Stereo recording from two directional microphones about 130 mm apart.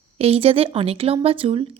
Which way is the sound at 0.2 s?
50° right (ahead or behind).